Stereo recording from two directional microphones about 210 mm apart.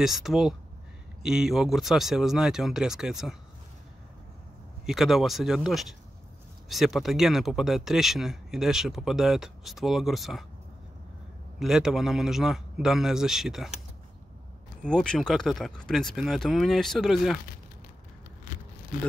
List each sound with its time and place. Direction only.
0.0 s speech: centre (ahead or behind)
4.8 s speech: centre (ahead or behind)
11.6 s speech: centre (ahead or behind)
14.9 s speech: 5° left (ahead or behind)